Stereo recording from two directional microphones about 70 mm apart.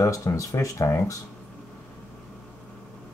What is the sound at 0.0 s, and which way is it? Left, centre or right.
Speech, left.